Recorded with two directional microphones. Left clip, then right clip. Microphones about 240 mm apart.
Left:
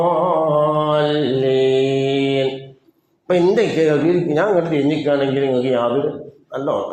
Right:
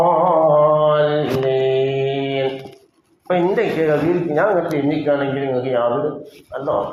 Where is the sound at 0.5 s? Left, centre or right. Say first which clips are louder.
Right 3 dB; left.